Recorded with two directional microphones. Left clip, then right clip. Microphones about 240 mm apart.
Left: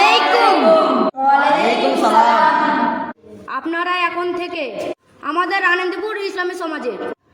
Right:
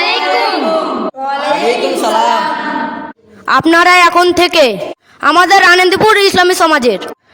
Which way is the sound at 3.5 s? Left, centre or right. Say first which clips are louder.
Right 13 dB; right.